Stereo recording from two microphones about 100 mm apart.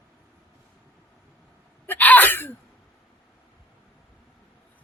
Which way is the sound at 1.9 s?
15° left (ahead or behind).